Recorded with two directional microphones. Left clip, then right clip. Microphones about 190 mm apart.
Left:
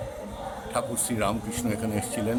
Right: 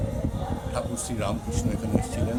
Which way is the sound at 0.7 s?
25° left (ahead or behind).